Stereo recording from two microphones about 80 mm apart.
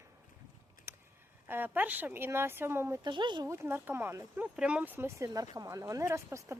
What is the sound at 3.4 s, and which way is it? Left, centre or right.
Speech, right.